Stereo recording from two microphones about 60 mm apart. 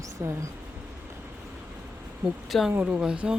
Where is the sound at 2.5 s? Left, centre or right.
Centre.